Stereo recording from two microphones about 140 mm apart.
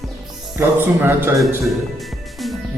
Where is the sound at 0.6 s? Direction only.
15° right (ahead or behind).